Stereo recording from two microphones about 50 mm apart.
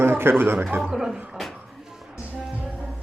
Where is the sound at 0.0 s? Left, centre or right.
Right.